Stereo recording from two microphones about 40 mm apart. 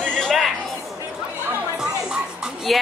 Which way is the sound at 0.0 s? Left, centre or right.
Centre.